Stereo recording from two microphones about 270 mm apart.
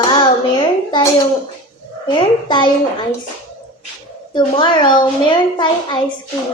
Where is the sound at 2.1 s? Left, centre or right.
Centre.